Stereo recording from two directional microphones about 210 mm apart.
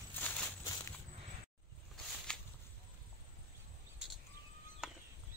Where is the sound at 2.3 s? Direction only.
5° left (ahead or behind).